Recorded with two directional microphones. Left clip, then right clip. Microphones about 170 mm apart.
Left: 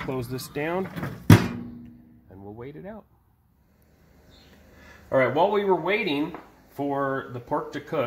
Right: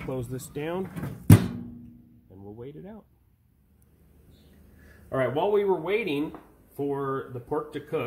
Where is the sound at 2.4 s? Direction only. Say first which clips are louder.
Left 3 dB; 25° left (ahead or behind).